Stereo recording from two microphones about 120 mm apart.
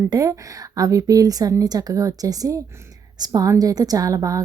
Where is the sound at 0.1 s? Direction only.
25° right (ahead or behind).